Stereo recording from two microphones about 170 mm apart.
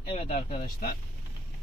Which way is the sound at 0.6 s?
55° left (ahead or behind).